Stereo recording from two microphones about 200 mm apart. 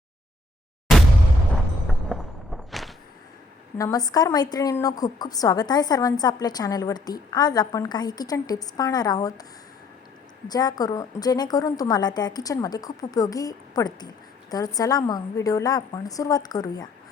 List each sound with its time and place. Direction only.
1.9 s a sound: centre (ahead or behind)
3.8 s a woman's voice: 15° left (ahead or behind)
10.5 s a woman's voice: 20° left (ahead or behind)